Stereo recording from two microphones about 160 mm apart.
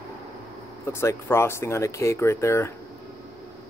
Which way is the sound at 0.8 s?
15° left (ahead or behind).